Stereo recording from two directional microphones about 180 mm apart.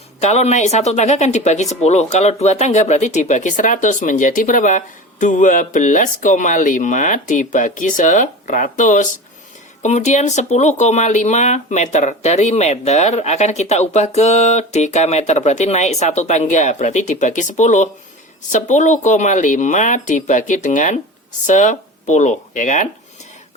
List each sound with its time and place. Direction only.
0.2 s speech: 40° left (ahead or behind)